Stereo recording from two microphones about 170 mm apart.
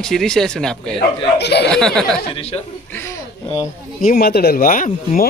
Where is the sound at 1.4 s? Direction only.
80° left.